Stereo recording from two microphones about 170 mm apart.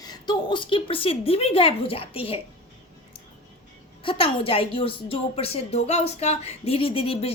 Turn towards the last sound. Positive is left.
turn(degrees=35)  # may be behind; listen again after turning